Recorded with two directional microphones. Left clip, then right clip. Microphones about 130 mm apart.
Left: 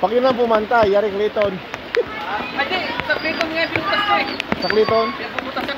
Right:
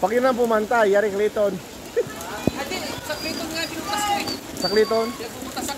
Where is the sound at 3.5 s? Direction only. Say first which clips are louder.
Left 6 dB; 15° right (ahead or behind).